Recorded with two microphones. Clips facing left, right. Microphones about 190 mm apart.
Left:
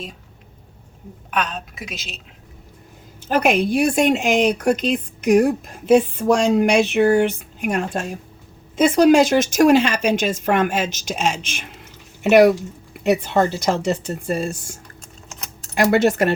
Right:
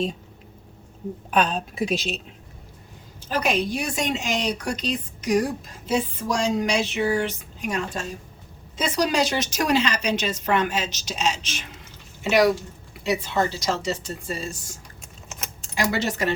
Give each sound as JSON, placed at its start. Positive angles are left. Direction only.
{"t": 1.3, "sound": "a woman's voice", "side_deg": -35}
{"t": 2.0, "sound": "a woman's voice", "side_deg": 5}
{"t": 3.2, "sound": "a woman's voice", "side_deg": 60}